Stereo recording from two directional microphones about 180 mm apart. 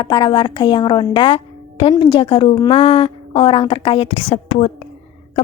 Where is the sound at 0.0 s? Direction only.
25° left (ahead or behind).